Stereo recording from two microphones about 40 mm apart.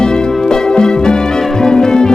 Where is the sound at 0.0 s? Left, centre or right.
Centre.